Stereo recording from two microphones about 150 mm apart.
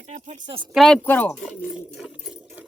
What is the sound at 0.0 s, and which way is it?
Speech, 50° right (ahead or behind).